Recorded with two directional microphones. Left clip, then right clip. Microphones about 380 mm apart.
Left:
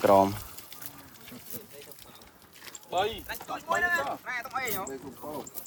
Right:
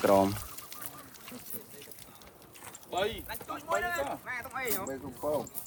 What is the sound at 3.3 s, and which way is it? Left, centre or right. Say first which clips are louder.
Speech: left 3 dB; left.